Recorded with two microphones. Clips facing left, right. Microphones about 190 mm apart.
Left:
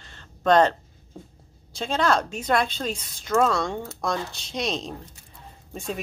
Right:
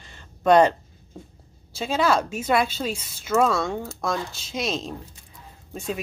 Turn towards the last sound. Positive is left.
turn(degrees=0)  # may be behind; listen again after turning